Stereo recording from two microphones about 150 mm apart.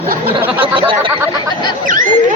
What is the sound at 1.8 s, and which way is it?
Speech, 60° right (ahead or behind).